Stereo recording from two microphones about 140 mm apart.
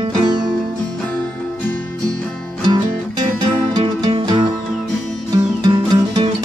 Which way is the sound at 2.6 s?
35° right (ahead or behind).